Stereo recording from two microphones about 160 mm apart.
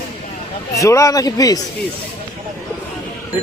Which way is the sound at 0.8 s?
20° left (ahead or behind).